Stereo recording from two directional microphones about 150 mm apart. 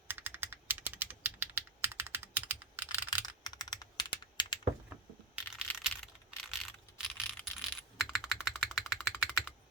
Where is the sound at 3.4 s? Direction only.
25° left (ahead or behind).